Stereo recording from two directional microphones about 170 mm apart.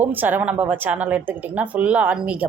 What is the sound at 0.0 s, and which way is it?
A woman's voice, 10° right (ahead or behind).